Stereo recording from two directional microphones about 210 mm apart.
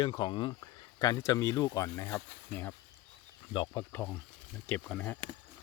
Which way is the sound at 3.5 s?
20° left (ahead or behind).